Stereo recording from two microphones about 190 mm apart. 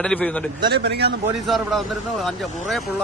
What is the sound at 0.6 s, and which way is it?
Speech, 55° right (ahead or behind).